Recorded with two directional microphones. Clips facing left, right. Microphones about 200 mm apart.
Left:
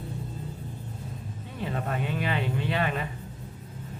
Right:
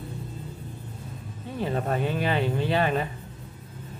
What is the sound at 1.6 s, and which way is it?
A man's voice, 35° right (ahead or behind).